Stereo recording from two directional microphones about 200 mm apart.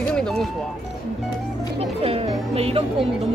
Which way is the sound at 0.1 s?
5° left (ahead or behind).